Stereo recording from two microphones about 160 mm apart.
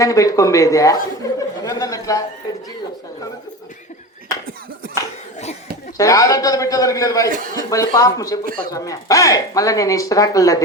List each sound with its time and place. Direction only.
0.0 s speech: 20° left (ahead or behind)
1.6 s a sound: 20° left (ahead or behind)
6.0 s speech: 20° left (ahead or behind)
8.4 s speech: 60° right (ahead or behind)
8.7 s speech: 20° left (ahead or behind)